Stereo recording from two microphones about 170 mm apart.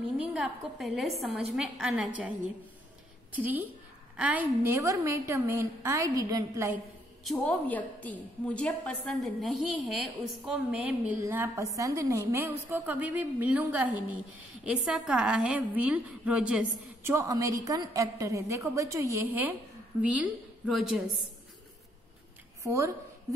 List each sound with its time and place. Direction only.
0.3 s a woman's voice: 5° right (ahead or behind)
3.3 s a woman's voice: 10° right (ahead or behind)
7.2 s a woman's voice: 5° left (ahead or behind)
22.7 s a woman's voice: 15° right (ahead or behind)